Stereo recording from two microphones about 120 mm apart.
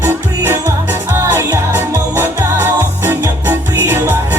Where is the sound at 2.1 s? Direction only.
20° right (ahead or behind).